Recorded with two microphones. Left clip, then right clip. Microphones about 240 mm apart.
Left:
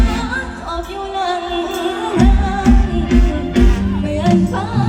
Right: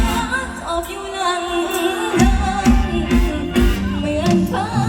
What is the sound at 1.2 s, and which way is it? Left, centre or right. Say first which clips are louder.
Music: right 1 dB; right.